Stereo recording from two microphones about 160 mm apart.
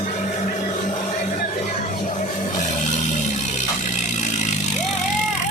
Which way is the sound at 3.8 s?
50° left (ahead or behind).